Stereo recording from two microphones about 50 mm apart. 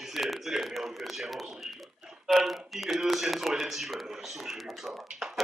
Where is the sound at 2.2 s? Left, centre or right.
Centre.